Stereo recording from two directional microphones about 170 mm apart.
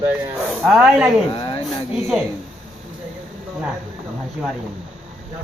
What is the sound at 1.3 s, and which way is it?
Speech, 30° left (ahead or behind).